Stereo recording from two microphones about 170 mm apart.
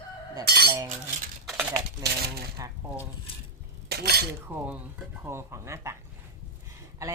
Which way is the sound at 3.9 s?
70° right (ahead or behind).